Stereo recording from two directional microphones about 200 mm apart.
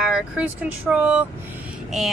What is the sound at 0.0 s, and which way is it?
Speech, 5° right (ahead or behind).